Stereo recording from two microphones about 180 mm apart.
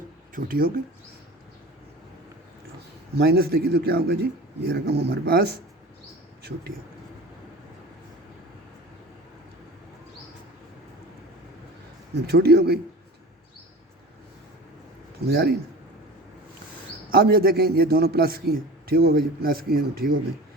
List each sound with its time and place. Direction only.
0.3 s a man's voice: 55° right (ahead or behind)
3.2 s a man's voice: 60° right (ahead or behind)
12.1 s a man's voice: 60° right (ahead or behind)
15.3 s a man's voice: 60° right (ahead or behind)
17.1 s a man's voice: 60° right (ahead or behind)